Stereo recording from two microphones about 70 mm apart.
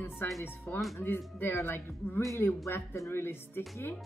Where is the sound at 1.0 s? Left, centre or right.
Left.